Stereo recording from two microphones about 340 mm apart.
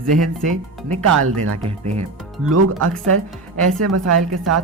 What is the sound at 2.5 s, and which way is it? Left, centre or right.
Speech, right.